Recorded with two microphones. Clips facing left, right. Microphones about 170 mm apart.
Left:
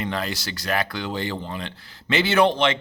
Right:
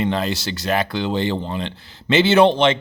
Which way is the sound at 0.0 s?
25° right (ahead or behind).